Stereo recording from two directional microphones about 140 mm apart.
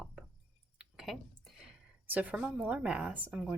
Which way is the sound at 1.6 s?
10° right (ahead or behind).